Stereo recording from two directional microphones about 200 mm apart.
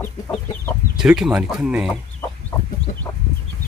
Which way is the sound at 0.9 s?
5° right (ahead or behind).